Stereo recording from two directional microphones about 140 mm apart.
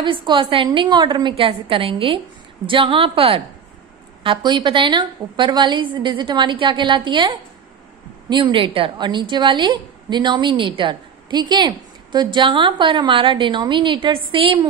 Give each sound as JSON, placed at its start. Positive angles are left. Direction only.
{"t": 0.0, "sound": "a woman's voice", "side_deg": -35}